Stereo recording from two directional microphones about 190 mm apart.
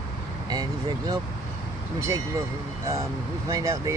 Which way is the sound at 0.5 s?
20° right (ahead or behind).